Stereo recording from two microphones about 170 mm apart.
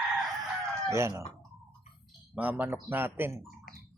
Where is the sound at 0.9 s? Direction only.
15° right (ahead or behind).